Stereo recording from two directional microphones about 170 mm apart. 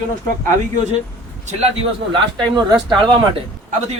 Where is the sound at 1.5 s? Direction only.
35° right (ahead or behind).